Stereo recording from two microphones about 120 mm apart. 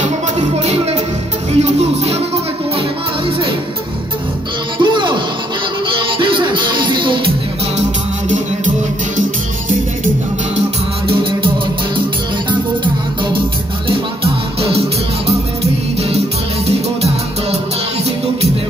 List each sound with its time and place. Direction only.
0.6 s music: 65° right (ahead or behind)
4.7 s music: 45° right (ahead or behind)
8.3 s music: 90° right
11.1 s music: 45° right (ahead or behind)
13.8 s music: 55° right (ahead or behind)
16.6 s music: 60° right (ahead or behind)